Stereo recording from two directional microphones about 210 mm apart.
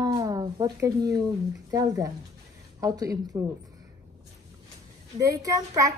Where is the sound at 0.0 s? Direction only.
20° right (ahead or behind).